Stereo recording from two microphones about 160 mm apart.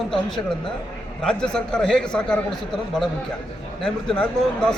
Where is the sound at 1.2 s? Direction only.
5° left (ahead or behind).